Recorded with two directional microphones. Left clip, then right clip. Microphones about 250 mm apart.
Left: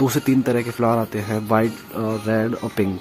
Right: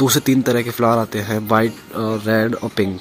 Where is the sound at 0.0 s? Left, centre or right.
Centre.